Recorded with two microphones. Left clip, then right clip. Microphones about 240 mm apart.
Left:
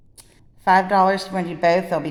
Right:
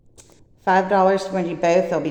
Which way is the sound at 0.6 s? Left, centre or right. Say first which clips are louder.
Left 1 dB; left.